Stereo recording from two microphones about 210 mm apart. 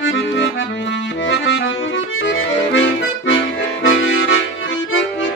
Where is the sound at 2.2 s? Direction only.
60° left (ahead or behind).